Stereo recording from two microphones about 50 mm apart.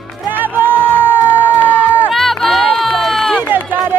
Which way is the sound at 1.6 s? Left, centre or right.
Left.